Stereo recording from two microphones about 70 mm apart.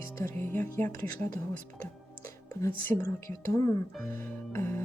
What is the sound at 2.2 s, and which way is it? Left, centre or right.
Music, left.